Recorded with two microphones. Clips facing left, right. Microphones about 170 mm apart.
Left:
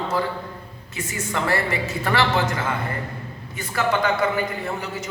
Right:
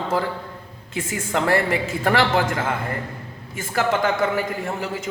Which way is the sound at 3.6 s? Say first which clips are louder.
Right 1 dB; 45° right (ahead or behind).